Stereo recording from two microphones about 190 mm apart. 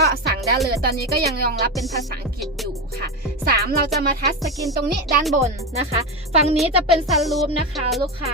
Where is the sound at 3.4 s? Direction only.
50° right (ahead or behind).